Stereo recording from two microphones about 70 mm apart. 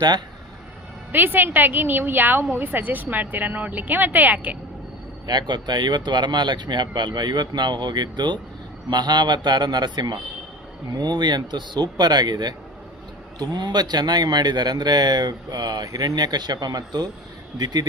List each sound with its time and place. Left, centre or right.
1.1 s a woman's voice: right
5.2 s speech: right